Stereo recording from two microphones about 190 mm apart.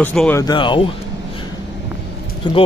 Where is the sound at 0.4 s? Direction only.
25° left (ahead or behind).